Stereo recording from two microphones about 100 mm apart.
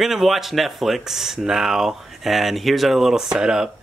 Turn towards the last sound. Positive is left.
turn(degrees=-5)  # may be behind; listen again after turning